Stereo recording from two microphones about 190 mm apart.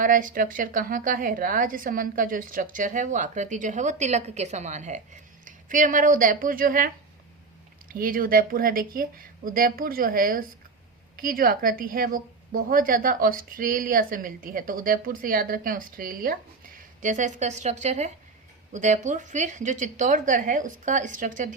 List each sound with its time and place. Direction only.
0.0 s a woman's voice: 45° right (ahead or behind)
7.9 s a woman's voice: 50° right (ahead or behind)